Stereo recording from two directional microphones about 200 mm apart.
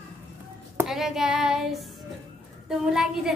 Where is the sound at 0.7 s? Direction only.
Centre (ahead or behind).